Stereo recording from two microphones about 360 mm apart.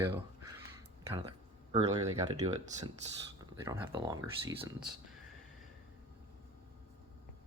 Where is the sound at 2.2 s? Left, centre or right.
Centre.